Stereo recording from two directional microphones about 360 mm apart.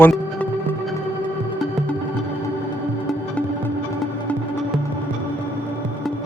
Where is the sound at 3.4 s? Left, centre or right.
Centre.